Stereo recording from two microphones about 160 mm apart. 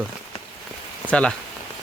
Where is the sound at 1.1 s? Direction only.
5° left (ahead or behind).